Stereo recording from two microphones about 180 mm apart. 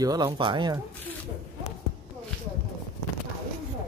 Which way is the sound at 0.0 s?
20° right (ahead or behind).